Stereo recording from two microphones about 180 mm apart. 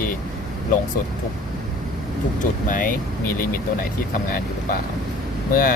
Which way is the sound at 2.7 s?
50° left (ahead or behind).